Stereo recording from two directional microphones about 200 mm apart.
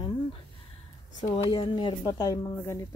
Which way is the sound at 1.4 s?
20° left (ahead or behind).